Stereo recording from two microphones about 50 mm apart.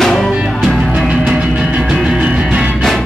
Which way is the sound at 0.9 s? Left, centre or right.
Centre.